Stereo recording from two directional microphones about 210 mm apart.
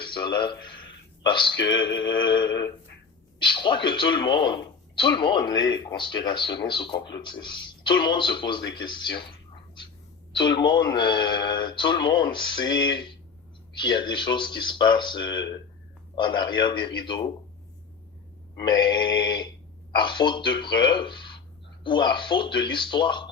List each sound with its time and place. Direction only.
0.0 s speech: 20° left (ahead or behind)
10.3 s speech: 20° left (ahead or behind)
18.5 s speech: 20° left (ahead or behind)